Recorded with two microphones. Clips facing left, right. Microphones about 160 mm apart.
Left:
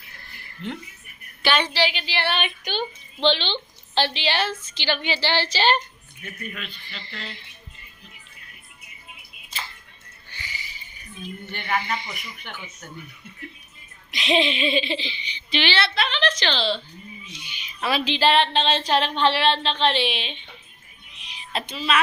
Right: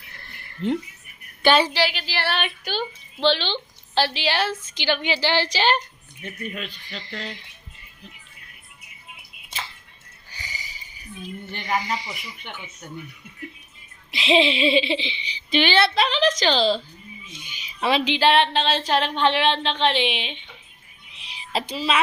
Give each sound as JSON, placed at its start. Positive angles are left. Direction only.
{"t": 0.6, "sound": "a woman's voice", "side_deg": -35}
{"t": 1.7, "sound": "speech", "side_deg": -5}
{"t": 6.2, "sound": "speech", "side_deg": -30}
{"t": 7.0, "sound": "speech", "side_deg": -15}
{"t": 11.7, "sound": "a woman's voice", "side_deg": -35}
{"t": 14.1, "sound": "speech", "side_deg": -30}
{"t": 15.4, "sound": "a woman's voice", "side_deg": -45}
{"t": 17.7, "sound": "speech", "side_deg": -20}
{"t": 21.2, "sound": "a sound", "side_deg": -30}